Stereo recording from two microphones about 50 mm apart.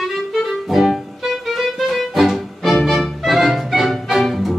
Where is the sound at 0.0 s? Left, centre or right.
Centre.